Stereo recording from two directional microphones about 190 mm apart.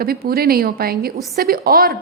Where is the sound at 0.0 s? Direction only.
55° right (ahead or behind).